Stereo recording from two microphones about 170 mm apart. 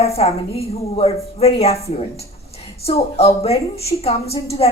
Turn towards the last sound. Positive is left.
turn(degrees=35)  # may be behind; listen again after turning